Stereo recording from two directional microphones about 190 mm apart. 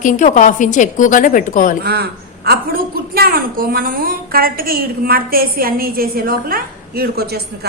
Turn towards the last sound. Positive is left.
turn(degrees=-55)  # may be behind; listen again after turning